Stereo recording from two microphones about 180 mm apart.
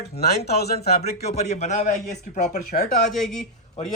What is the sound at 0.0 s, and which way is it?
Speech, 65° left (ahead or behind).